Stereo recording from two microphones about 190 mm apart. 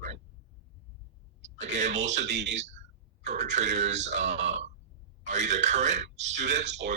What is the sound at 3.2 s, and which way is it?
A man's voice, 40° right (ahead or behind).